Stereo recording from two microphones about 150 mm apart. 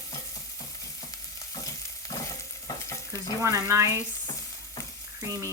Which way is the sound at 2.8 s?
20° left (ahead or behind).